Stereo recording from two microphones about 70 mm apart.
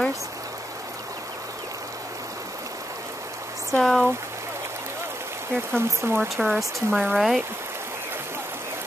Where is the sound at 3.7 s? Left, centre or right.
Centre.